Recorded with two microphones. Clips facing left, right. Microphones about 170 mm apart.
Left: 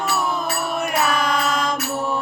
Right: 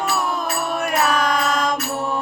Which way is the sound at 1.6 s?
5° left (ahead or behind).